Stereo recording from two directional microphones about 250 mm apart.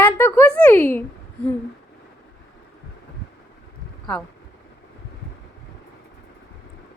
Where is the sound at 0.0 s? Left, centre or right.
Centre.